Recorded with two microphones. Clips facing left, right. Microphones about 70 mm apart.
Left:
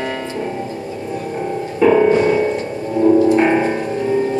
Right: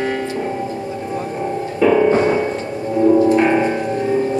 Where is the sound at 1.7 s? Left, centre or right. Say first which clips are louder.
Left 2 dB; centre.